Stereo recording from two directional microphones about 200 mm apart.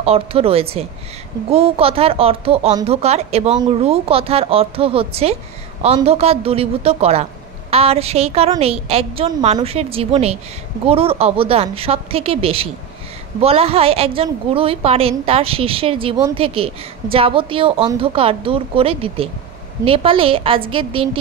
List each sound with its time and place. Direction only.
0.0 s speech: 30° right (ahead or behind)